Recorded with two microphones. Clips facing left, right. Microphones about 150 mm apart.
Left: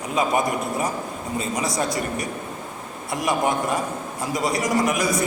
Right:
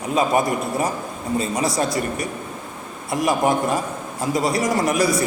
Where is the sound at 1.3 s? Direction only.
30° right (ahead or behind).